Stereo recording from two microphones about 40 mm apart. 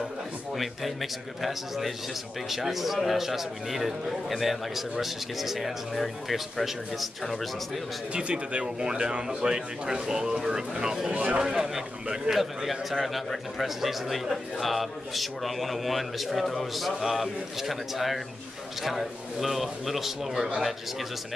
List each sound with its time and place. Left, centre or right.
1.4 s a man's voice: centre
8.1 s speech: right
11.1 s speech: right
11.4 s a man's voice: centre